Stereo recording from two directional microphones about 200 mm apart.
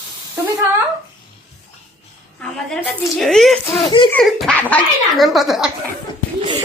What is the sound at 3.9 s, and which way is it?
Speech, 25° left (ahead or behind).